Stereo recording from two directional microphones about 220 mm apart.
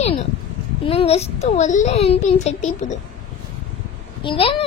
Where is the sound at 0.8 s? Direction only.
25° left (ahead or behind).